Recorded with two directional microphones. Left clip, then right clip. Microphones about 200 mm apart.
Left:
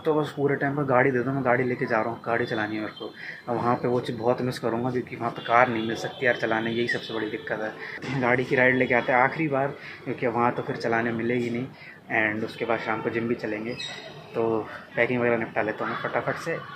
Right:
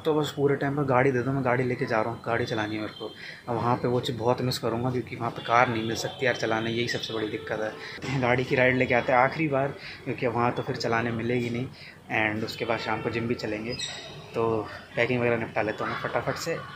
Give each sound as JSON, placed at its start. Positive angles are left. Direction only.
{"t": 0.0, "sound": "speech", "side_deg": -10}
{"t": 8.2, "sound": "speech", "side_deg": -10}
{"t": 15.0, "sound": "speech", "side_deg": -15}